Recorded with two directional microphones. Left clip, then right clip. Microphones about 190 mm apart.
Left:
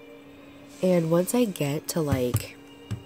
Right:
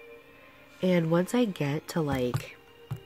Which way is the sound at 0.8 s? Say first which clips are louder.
Left 4 dB; 10° right (ahead or behind).